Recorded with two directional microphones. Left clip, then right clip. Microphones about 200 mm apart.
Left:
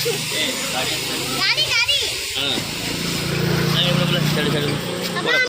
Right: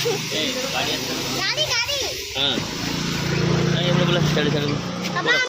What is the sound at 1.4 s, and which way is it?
Speech, 35° right (ahead or behind).